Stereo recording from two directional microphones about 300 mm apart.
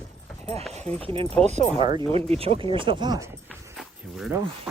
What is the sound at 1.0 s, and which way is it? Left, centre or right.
Speech, centre.